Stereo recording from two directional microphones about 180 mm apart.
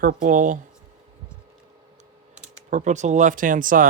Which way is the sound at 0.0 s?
50° right (ahead or behind).